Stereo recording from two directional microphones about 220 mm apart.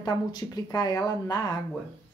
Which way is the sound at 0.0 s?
20° left (ahead or behind).